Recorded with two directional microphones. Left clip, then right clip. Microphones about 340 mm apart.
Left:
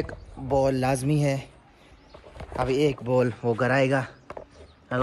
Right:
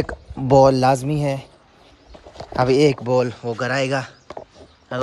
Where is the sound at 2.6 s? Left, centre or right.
Centre.